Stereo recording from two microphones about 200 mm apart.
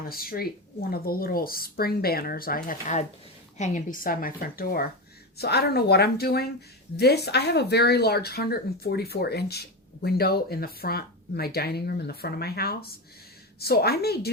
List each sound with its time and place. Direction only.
0.1 s speech: 50° left (ahead or behind)